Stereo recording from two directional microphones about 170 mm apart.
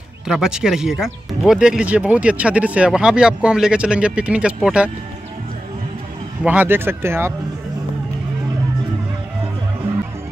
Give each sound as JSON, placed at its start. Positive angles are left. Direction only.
{"t": 0.3, "sound": "speech", "side_deg": -5}
{"t": 6.4, "sound": "speech", "side_deg": -10}